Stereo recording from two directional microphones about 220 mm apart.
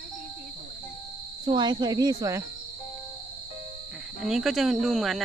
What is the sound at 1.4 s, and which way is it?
Speech, 20° right (ahead or behind).